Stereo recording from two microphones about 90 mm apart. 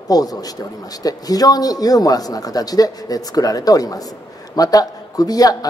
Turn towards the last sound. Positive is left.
turn(degrees=45)  # may be behind; listen again after turning